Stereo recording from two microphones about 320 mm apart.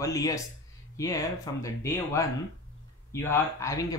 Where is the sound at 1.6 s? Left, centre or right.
Centre.